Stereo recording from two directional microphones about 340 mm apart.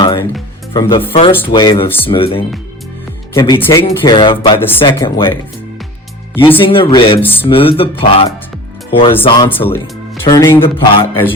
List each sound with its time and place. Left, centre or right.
0.0 s music: centre
0.7 s speech: centre
6.4 s speech: centre
7.4 s speech: centre